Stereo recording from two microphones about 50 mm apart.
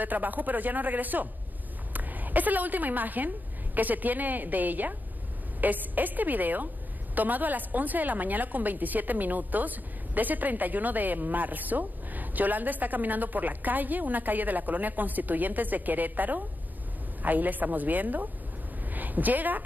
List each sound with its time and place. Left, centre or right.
0.0 s a woman's voice: right